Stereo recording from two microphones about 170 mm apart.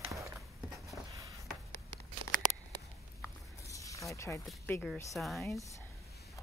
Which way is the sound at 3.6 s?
20° left (ahead or behind).